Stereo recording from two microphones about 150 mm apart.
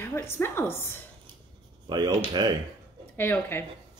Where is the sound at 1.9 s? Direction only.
30° right (ahead or behind).